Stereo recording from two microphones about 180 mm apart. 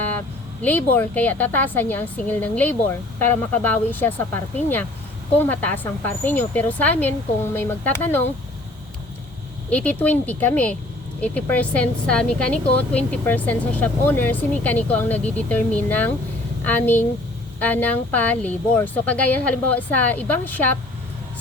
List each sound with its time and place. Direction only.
0.6 s speech: 10° left (ahead or behind)
9.6 s speech: 5° left (ahead or behind)